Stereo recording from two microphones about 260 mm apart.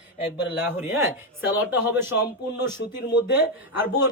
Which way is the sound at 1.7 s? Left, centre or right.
Centre.